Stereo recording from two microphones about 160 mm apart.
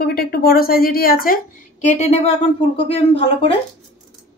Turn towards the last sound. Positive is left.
turn(degrees=35)  # may be behind; listen again after turning